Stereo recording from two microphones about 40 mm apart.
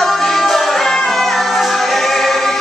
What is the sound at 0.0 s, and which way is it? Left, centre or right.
Music, centre.